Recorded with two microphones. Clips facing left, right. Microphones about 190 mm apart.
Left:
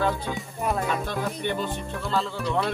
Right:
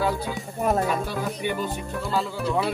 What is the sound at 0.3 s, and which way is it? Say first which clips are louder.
Speech: right 3 dB; 40° right (ahead or behind).